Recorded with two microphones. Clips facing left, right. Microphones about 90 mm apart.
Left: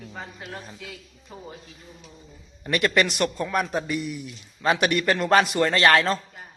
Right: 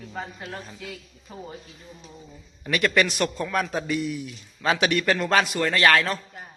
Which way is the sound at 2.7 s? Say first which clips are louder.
Even; 15° left (ahead or behind).